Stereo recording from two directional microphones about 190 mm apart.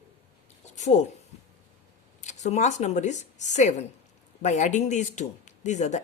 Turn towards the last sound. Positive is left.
turn(degrees=40)  # may be behind; listen again after turning